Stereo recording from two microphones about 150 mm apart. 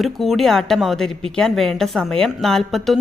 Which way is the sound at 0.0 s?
Centre (ahead or behind).